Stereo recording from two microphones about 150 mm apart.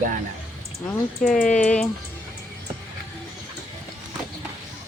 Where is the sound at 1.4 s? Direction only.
5° left (ahead or behind).